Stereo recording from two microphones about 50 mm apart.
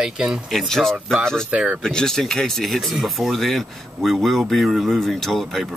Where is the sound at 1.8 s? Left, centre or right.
Centre.